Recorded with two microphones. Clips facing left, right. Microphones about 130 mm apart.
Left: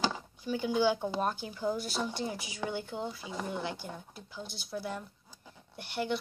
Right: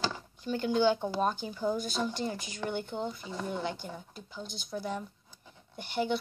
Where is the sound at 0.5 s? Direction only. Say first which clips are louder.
Right 2 dB; 10° left (ahead or behind).